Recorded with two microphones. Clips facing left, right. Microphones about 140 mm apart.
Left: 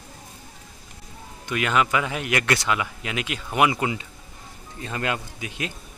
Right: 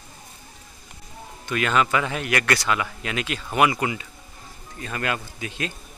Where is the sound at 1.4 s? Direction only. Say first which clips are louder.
Right 1 dB; 15° left (ahead or behind).